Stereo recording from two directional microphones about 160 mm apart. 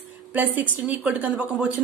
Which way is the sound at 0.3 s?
10° right (ahead or behind).